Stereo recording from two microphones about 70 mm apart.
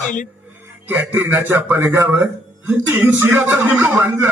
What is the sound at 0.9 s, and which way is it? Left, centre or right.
A man's voice, right.